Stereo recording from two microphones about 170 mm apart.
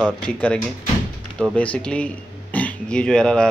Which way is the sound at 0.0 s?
5° left (ahead or behind).